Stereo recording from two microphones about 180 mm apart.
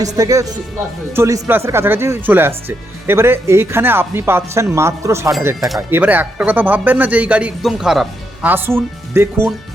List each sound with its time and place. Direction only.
0.0 s speech: 20° right (ahead or behind)